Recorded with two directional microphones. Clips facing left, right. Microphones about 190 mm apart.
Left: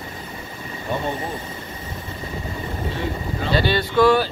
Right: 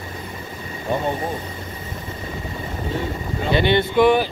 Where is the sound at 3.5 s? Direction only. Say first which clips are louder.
Right 2 dB; 20° right (ahead or behind).